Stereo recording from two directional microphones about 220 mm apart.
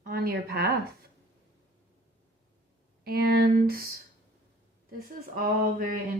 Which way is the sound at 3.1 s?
45° right (ahead or behind).